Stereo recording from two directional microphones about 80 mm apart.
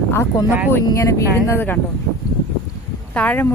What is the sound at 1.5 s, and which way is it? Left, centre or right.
Speech, left.